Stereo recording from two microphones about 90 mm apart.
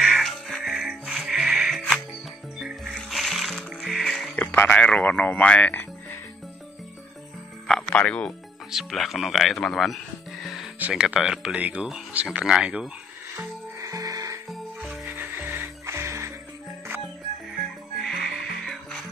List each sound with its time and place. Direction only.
0.0 s music: centre (ahead or behind)
1.8 s music: 15° left (ahead or behind)
2.9 s music: centre (ahead or behind)
4.4 s speech: 15° left (ahead or behind)
7.6 s speech: 10° left (ahead or behind)
8.7 s speech: centre (ahead or behind)
10.8 s speech: 15° right (ahead or behind)
13.7 s music: 40° right (ahead or behind)
14.9 s music: 25° right (ahead or behind)
18.0 s music: 5° left (ahead or behind)